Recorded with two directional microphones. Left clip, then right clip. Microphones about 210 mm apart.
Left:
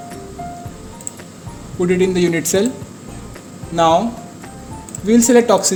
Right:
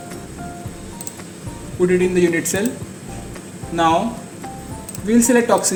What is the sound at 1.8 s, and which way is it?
Speech, 50° left (ahead or behind).